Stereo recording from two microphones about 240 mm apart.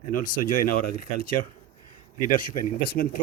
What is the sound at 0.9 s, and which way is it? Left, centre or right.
Speech, left.